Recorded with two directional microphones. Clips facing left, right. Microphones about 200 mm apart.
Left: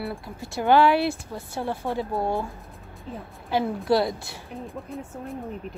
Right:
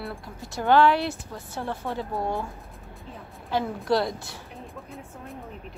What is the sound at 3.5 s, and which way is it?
Speech, 5° left (ahead or behind).